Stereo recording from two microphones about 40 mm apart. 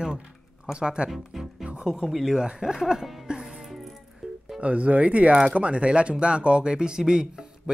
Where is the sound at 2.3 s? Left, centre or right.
Centre.